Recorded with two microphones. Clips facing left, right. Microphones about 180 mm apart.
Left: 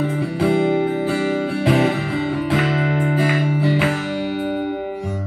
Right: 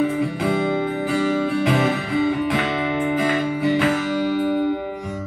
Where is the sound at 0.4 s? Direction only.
30° left (ahead or behind).